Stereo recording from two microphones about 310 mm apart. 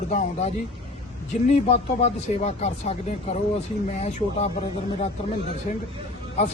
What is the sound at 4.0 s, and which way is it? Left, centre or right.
Speech, left.